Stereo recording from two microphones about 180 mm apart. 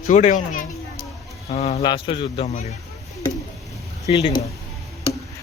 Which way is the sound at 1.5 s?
35° left (ahead or behind).